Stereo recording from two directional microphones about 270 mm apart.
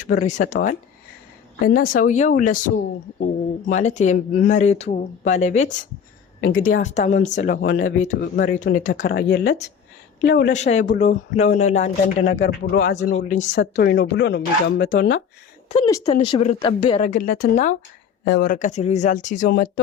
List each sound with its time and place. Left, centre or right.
0.1 s speech: left
10.5 s speech: left
13.1 s speech: left
13.5 s speech: left
16.0 s speech: left
17.0 s speech: left